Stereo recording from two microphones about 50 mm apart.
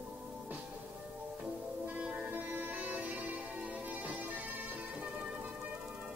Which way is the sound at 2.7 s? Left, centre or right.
Right.